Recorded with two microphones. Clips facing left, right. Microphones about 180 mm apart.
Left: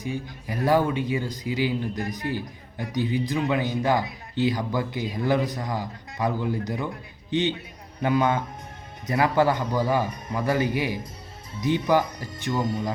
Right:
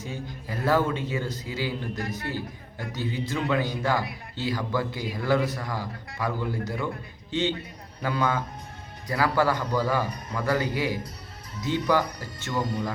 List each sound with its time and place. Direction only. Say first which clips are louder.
0.0 s a man's voice: left 4 dB; 15° left (ahead or behind)